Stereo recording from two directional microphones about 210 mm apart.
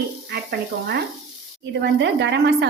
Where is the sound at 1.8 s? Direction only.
60° right (ahead or behind).